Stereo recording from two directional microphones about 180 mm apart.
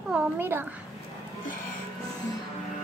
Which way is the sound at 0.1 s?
10° right (ahead or behind).